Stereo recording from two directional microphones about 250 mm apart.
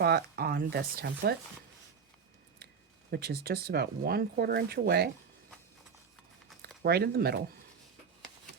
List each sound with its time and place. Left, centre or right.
0.0 s speech: right
3.1 s speech: right
6.8 s speech: right